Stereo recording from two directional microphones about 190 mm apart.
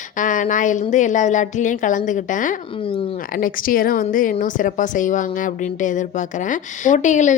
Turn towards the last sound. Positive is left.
turn(degrees=40)  # may be behind; listen again after turning